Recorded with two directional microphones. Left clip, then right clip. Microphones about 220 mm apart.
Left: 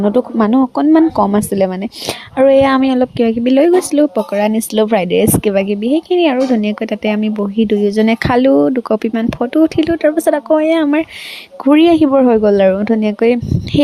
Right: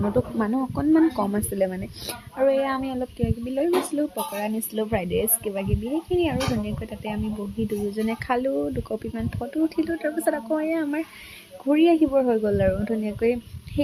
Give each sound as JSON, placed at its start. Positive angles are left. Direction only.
{"t": 0.1, "sound": "speech", "side_deg": 35}